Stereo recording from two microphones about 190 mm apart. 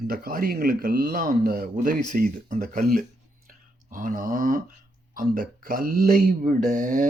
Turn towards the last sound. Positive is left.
turn(degrees=-45)  # may be behind; listen again after turning